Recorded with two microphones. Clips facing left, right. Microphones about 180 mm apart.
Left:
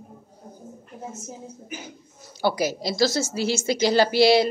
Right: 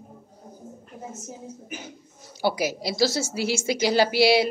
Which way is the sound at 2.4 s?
10° right (ahead or behind).